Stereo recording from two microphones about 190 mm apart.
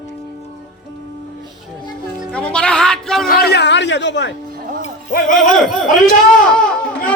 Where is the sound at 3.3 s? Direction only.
55° left (ahead or behind).